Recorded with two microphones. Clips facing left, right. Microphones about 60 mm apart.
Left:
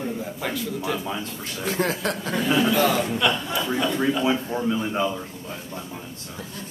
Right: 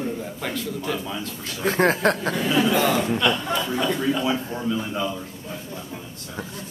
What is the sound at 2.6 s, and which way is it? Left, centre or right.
Speech, right.